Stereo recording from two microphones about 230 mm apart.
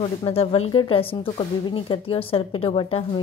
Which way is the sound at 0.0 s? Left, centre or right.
Left.